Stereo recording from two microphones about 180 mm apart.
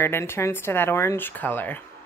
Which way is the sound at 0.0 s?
15° left (ahead or behind).